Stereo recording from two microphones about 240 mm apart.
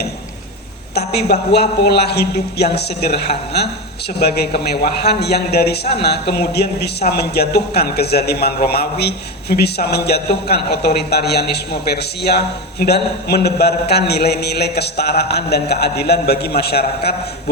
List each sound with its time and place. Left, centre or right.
0.9 s a man's voice: left